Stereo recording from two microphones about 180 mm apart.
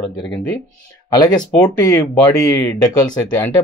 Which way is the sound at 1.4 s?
10° left (ahead or behind).